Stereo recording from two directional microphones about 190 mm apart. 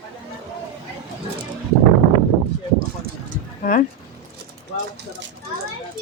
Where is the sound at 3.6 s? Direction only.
45° left (ahead or behind).